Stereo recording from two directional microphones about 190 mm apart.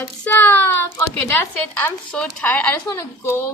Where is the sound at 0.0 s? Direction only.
10° left (ahead or behind).